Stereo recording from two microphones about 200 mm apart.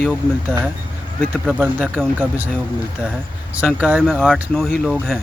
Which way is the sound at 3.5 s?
5° right (ahead or behind).